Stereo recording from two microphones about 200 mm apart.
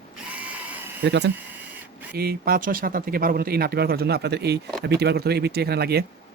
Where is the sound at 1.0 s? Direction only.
55° right (ahead or behind).